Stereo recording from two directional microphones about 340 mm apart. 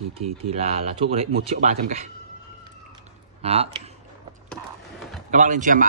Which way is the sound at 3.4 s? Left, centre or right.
Centre.